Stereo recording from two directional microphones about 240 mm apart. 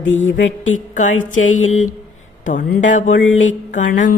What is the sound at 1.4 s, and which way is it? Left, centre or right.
Mantra, left.